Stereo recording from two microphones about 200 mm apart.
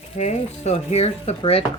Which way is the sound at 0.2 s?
35° left (ahead or behind).